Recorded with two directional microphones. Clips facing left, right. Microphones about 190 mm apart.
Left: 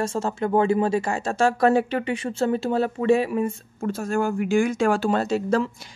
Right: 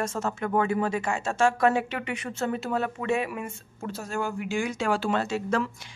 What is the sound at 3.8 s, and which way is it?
Speech, 50° left (ahead or behind).